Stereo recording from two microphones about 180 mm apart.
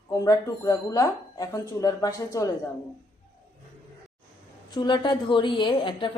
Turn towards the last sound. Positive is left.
turn(degrees=25)  # may be behind; listen again after turning